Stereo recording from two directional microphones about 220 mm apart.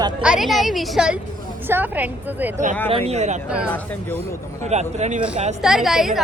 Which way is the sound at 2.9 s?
30° right (ahead or behind).